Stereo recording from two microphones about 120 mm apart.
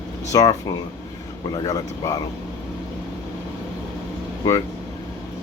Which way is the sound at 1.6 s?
30° left (ahead or behind).